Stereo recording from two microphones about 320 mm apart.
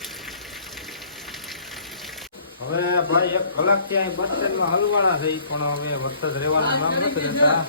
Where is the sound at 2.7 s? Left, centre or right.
Left.